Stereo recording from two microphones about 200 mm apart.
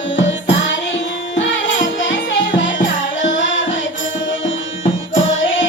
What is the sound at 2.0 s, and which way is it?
Music, 65° left (ahead or behind).